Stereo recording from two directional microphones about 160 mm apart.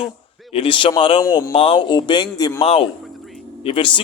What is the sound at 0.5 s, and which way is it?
A man's voice, 35° left (ahead or behind).